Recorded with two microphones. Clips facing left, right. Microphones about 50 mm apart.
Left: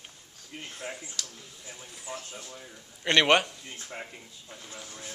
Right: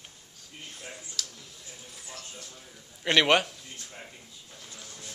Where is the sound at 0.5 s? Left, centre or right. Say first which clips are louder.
Left 4 dB; left.